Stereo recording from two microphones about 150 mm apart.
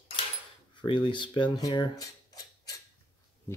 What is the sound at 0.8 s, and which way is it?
Speech, 35° left (ahead or behind).